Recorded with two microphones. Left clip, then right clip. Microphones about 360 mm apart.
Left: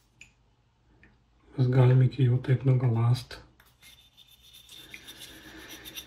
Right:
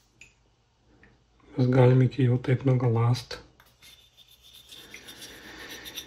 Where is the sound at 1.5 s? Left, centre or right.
Right.